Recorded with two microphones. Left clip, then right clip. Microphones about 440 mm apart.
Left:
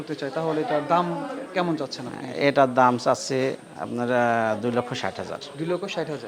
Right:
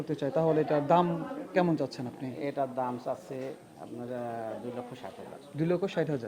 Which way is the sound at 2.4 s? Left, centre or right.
Left.